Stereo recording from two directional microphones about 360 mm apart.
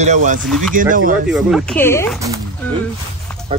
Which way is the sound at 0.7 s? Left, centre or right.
Right.